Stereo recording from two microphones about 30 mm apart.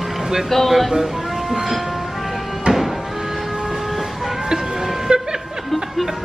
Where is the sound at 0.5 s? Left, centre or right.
Centre.